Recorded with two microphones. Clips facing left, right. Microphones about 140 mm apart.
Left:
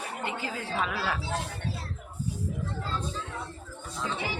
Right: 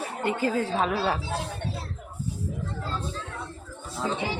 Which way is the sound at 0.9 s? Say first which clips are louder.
Right 4 dB; 30° right (ahead or behind).